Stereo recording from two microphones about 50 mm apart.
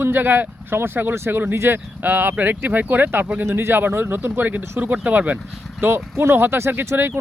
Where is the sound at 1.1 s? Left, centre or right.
Right.